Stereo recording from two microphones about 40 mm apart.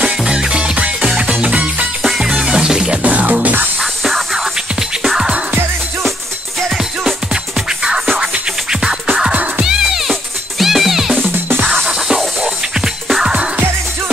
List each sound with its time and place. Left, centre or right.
0.3 s music: right
1.5 s music: right
2.2 s music: centre
3.0 s music: right
8.2 s music: centre
9.3 s music: right
9.7 s music: centre
11.3 s music: right
12.1 s music: centre
13.2 s music: right